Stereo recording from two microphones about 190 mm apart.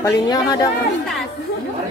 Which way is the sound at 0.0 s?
20° left (ahead or behind).